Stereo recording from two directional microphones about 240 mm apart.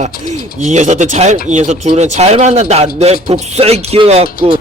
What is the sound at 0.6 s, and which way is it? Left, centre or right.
Speech, right.